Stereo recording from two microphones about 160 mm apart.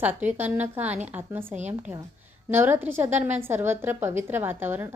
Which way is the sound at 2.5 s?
15° right (ahead or behind).